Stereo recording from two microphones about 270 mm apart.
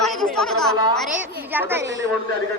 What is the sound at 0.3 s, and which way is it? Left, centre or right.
A woman's voice, centre.